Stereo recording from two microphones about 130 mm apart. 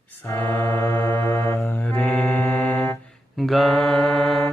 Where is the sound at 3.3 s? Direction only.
Centre (ahead or behind).